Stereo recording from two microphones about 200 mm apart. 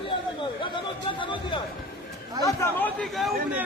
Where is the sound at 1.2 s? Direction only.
25° left (ahead or behind).